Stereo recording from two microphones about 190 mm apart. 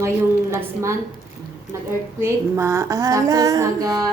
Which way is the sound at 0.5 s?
15° right (ahead or behind).